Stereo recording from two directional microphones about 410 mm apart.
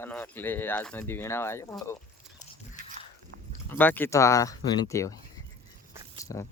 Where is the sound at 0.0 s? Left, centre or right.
Centre.